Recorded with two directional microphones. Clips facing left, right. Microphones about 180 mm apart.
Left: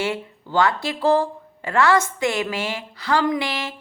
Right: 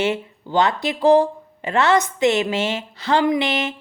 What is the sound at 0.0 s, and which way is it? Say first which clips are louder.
Speech: right 4 dB; 20° right (ahead or behind).